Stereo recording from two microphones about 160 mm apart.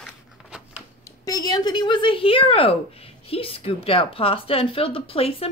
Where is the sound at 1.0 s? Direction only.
20° left (ahead or behind).